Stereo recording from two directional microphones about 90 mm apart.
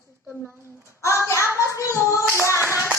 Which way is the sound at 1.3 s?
35° left (ahead or behind).